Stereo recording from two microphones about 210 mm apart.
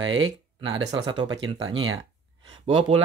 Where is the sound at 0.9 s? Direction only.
20° right (ahead or behind).